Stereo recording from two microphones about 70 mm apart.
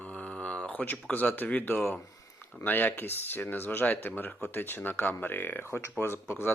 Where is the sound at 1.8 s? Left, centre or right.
Centre.